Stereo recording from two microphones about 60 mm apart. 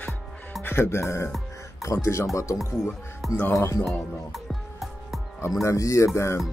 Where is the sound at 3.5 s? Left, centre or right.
Left.